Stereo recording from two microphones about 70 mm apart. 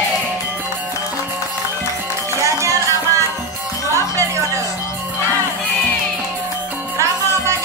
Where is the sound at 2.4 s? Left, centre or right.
Right.